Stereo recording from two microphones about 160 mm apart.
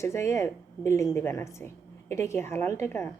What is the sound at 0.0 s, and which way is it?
A woman's voice, 15° left (ahead or behind).